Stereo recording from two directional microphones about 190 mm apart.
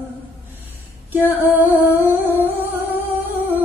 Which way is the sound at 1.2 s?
10° right (ahead or behind).